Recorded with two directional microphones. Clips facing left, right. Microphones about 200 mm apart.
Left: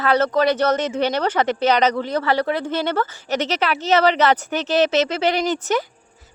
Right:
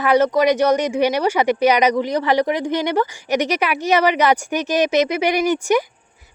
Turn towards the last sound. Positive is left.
turn(degrees=-15)  # may be behind; listen again after turning